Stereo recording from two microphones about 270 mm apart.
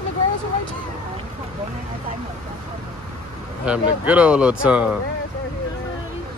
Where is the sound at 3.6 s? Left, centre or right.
Centre.